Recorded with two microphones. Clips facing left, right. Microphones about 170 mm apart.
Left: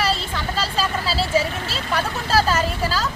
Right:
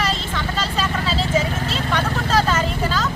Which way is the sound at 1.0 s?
35° left (ahead or behind).